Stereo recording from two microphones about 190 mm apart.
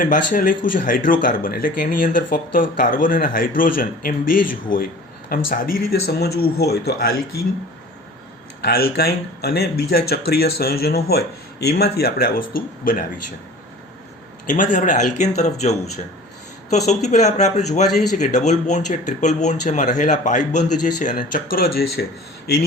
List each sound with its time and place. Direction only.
0.0 s speech: 45° left (ahead or behind)
8.6 s speech: 55° left (ahead or behind)
14.4 s speech: 40° left (ahead or behind)